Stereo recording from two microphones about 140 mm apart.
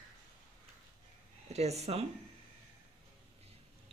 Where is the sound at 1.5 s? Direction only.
50° right (ahead or behind).